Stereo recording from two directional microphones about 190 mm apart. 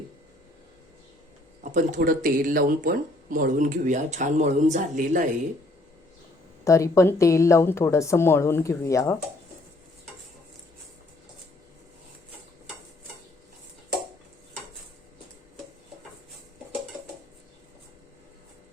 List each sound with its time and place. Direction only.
1.6 s speech: 40° right (ahead or behind)
6.7 s speech: 15° left (ahead or behind)